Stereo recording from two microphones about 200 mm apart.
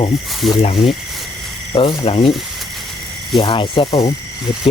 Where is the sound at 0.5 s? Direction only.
25° left (ahead or behind).